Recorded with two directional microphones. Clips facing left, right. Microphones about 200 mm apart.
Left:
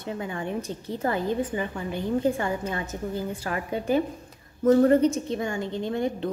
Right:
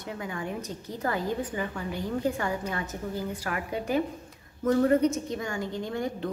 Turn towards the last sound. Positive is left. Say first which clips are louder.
# left 4 dB
turn(degrees=25)  # may be behind; listen again after turning